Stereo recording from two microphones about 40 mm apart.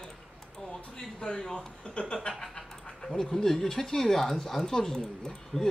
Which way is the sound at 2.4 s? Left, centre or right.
Centre.